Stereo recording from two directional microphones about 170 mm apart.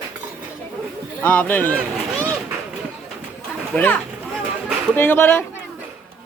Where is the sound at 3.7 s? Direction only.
10° left (ahead or behind).